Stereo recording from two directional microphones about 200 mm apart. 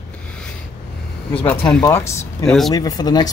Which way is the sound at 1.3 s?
10° left (ahead or behind).